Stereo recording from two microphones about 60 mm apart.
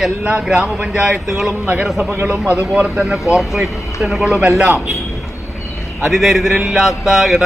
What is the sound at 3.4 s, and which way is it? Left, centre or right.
Speech, centre.